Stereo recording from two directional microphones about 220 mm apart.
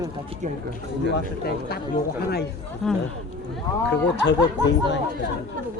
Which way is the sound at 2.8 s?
Centre (ahead or behind).